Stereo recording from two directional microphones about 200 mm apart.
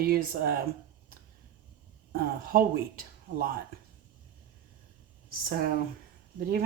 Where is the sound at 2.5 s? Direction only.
45° right (ahead or behind).